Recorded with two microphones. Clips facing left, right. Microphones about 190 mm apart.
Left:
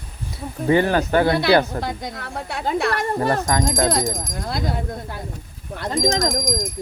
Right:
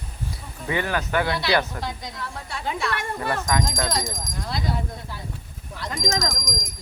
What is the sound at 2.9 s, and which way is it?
Speech, 40° left (ahead or behind).